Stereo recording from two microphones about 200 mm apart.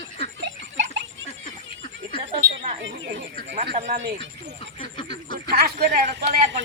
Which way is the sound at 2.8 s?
65° right (ahead or behind).